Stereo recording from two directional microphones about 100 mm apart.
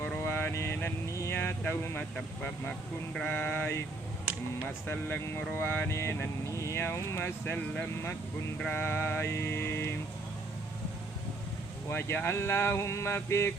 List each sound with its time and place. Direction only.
0.2 s vehicle: 20° left (ahead or behind)
3.2 s a sound: 15° left (ahead or behind)
4.9 s speech: 15° left (ahead or behind)
11.9 s speech: 25° left (ahead or behind)